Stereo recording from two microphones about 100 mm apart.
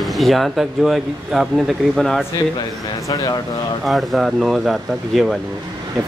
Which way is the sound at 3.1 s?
40° left (ahead or behind).